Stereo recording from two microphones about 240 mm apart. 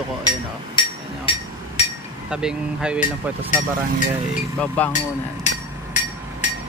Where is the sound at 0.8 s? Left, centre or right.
Centre.